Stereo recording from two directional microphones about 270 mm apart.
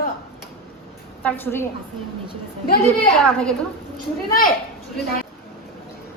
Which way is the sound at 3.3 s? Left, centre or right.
Centre.